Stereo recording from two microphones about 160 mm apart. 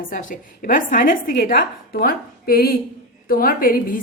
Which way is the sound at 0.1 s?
55° left (ahead or behind).